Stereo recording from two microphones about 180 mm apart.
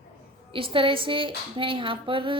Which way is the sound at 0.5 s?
30° right (ahead or behind).